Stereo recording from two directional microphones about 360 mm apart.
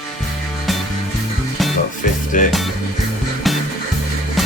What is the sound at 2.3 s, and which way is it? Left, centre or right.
Music, left.